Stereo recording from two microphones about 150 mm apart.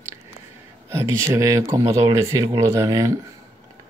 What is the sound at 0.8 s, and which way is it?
Speech, 20° right (ahead or behind).